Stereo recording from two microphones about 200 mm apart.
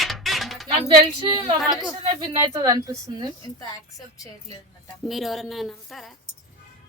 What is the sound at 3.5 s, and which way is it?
Speech, 15° left (ahead or behind).